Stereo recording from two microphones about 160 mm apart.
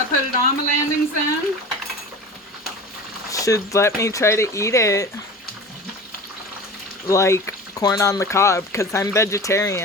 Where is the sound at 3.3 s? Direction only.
20° left (ahead or behind).